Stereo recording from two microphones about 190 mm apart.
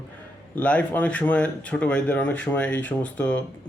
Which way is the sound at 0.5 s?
5° left (ahead or behind).